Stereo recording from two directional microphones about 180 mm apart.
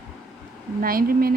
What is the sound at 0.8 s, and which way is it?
Speech, 55° right (ahead or behind).